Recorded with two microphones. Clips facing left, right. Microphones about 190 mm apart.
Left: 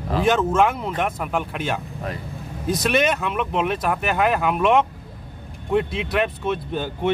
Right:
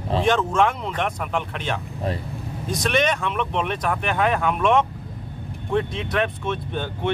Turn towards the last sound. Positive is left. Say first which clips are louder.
# left 2 dB
turn(degrees=5)  # may be behind; listen again after turning